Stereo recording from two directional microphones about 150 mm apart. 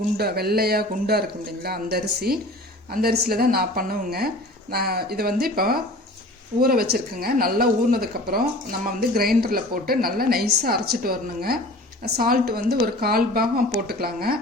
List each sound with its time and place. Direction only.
0.2 s a woman's voice: 90° right